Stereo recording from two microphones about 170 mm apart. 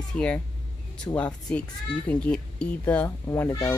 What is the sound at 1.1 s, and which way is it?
Speech, 20° left (ahead or behind).